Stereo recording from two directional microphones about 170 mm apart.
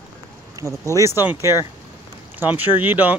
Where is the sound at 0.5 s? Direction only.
20° right (ahead or behind).